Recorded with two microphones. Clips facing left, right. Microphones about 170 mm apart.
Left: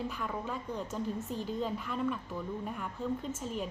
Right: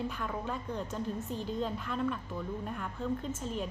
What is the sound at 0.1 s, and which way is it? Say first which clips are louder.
A woman's voice: even; centre (ahead or behind).